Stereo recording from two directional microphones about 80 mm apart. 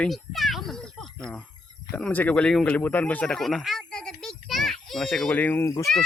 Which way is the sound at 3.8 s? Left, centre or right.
Centre.